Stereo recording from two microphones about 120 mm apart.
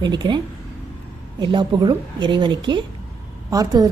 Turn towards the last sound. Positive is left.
turn(degrees=-30)  # may be behind; listen again after turning